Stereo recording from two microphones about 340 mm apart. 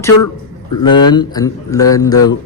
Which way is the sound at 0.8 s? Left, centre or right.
Centre.